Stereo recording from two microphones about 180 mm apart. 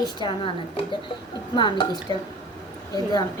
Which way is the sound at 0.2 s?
25° left (ahead or behind).